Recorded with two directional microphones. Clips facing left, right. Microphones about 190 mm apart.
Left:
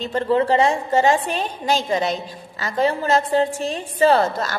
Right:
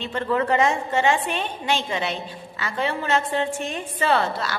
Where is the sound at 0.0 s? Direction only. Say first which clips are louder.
Left 5 dB; 35° left (ahead or behind).